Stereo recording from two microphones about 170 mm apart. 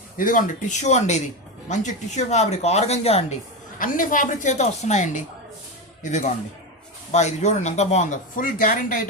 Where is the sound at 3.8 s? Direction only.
50° left (ahead or behind).